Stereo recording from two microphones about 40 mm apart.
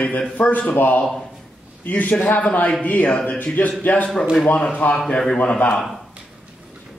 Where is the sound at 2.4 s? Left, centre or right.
Left.